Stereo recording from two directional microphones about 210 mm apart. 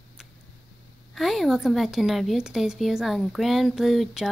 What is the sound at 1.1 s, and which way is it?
A woman's voice, centre (ahead or behind).